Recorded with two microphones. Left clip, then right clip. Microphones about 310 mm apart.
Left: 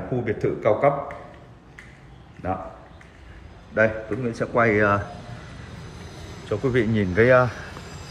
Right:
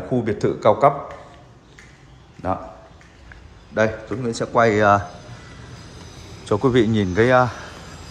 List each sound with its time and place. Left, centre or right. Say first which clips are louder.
0.2 s a man's voice: right 3 dB; centre
3.7 s a man's voice: even; centre
6.5 s a man's voice: right 5 dB; centre